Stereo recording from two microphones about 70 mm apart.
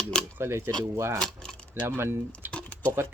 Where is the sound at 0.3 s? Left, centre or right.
Right.